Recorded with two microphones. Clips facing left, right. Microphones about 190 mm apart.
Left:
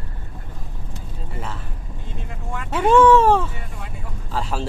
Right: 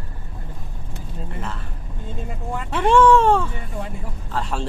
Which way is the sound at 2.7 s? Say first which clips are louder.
Left 1 dB; 5° left (ahead or behind).